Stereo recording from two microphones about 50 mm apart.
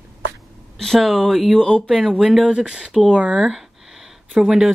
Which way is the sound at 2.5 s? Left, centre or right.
Centre.